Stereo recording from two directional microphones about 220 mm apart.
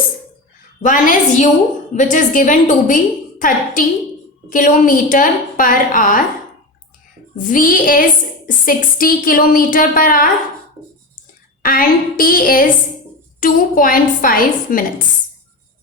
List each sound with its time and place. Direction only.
0.8 s a woman's voice: 35° left (ahead or behind)
7.3 s a woman's voice: 35° left (ahead or behind)
11.6 s a woman's voice: 40° left (ahead or behind)